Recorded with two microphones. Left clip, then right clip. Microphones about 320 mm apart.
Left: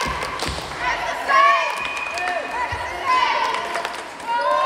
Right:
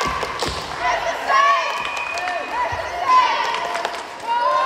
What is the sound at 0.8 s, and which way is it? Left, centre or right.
Run, right.